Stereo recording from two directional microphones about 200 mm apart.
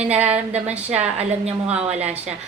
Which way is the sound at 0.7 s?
5° right (ahead or behind).